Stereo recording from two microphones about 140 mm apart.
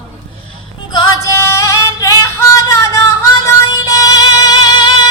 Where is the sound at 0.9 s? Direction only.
20° left (ahead or behind).